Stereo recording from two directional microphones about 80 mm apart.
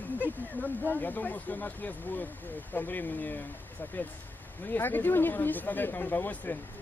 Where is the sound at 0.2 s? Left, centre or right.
Left.